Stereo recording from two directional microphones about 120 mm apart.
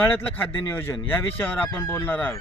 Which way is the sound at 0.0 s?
15° left (ahead or behind).